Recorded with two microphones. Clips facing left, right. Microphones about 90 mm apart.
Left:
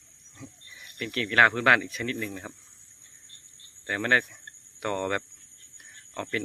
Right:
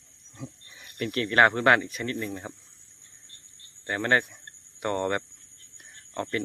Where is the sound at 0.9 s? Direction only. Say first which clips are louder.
Right 3 dB; 35° right (ahead or behind).